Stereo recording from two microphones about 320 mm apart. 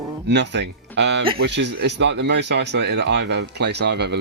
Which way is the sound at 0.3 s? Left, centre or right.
Right.